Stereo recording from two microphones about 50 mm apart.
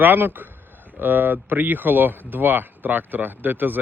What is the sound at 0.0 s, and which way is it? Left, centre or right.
Speech, right.